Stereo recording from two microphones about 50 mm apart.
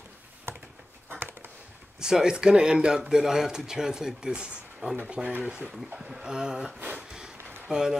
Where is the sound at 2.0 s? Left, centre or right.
Centre.